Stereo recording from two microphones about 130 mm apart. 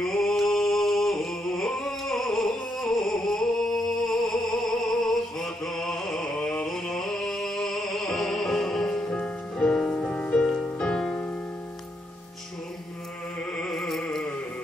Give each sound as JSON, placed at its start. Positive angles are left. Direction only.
{"t": 0.0, "sound": "music", "side_deg": 5}
{"t": 13.6, "sound": "music", "side_deg": 0}